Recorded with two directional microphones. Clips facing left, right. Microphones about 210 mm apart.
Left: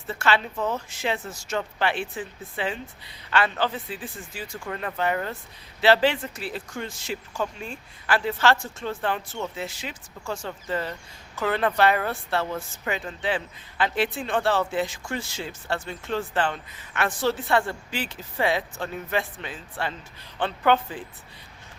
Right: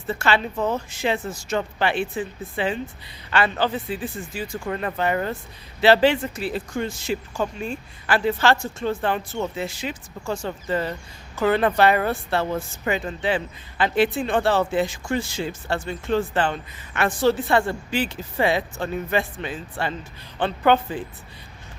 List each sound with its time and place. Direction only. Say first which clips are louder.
0.1 s speech: right 2 dB; centre (ahead or behind)
0.5 s a woman's voice: right 4 dB; 30° right (ahead or behind)
0.9 s speech: right 4 dB; centre (ahead or behind)